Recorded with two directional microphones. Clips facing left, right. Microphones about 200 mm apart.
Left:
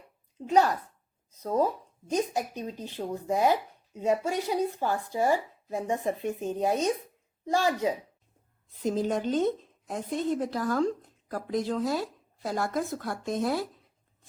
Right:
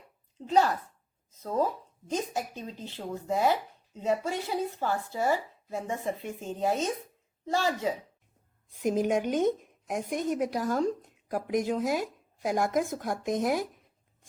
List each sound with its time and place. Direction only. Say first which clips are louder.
0.3 s speech: left 1 dB; 15° left (ahead or behind)
8.8 s a woman's voice: right 1 dB; 15° right (ahead or behind)